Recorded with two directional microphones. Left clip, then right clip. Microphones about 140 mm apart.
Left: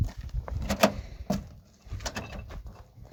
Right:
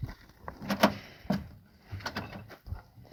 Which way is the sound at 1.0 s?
10° left (ahead or behind).